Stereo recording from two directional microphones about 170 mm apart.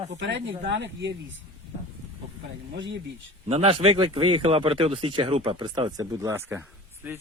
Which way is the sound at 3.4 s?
35° right (ahead or behind).